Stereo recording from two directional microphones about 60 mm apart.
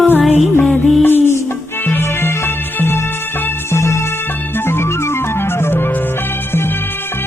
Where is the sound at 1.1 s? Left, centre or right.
Left.